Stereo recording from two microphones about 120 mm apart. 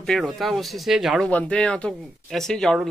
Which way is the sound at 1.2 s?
10° left (ahead or behind).